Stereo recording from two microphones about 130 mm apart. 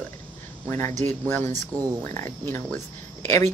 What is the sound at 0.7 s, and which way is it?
Speech, 20° left (ahead or behind).